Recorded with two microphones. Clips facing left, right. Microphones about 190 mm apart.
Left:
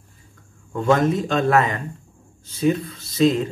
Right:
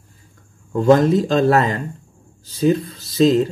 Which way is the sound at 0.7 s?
35° right (ahead or behind).